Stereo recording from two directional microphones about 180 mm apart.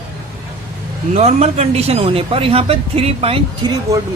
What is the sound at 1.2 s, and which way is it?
Speech, 35° right (ahead or behind).